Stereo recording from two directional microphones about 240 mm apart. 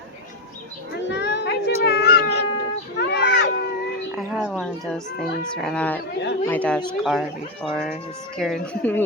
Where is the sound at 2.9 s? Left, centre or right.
Left.